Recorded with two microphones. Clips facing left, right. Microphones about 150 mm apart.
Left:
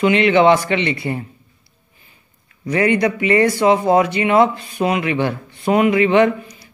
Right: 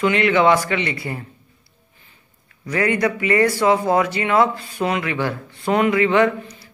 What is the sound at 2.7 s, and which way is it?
Speech, 20° left (ahead or behind).